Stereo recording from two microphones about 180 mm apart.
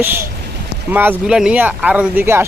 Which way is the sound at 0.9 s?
10° right (ahead or behind).